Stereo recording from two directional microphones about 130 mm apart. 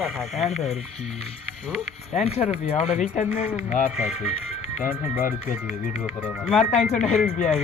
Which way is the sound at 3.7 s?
90° left.